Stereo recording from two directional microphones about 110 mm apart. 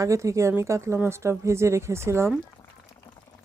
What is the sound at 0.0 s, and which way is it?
Speech, 30° right (ahead or behind).